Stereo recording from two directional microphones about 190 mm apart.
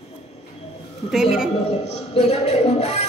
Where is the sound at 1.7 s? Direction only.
35° left (ahead or behind).